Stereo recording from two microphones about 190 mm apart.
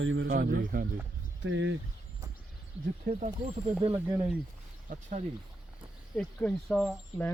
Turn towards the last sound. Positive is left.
turn(degrees=5)  # may be behind; listen again after turning